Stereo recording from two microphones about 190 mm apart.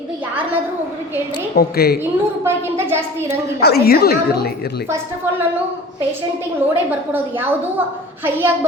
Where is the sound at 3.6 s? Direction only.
55° left (ahead or behind).